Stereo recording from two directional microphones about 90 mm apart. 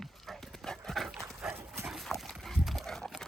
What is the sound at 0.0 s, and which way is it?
Horse, 5° left (ahead or behind).